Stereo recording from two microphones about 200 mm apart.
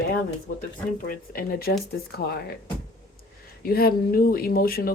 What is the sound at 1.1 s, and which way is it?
Speech, 45° left (ahead or behind).